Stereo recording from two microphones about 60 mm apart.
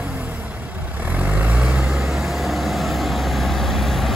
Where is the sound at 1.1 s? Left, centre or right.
Right.